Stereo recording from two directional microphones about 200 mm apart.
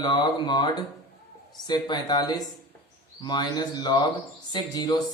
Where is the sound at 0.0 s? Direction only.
25° left (ahead or behind).